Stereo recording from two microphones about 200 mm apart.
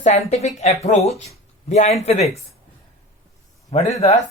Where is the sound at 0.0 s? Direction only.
30° left (ahead or behind).